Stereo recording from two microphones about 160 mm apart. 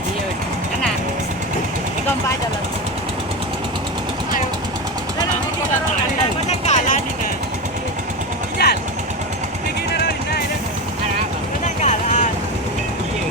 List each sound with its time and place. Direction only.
6.5 s vehicle: 50° left (ahead or behind)
8.5 s vehicle: 80° left
11.8 s vehicle: 50° left (ahead or behind)